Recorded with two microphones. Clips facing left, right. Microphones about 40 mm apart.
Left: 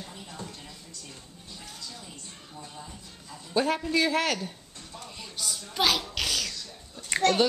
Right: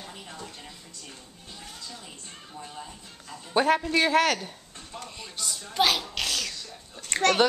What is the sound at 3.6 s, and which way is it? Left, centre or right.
A woman's voice, centre.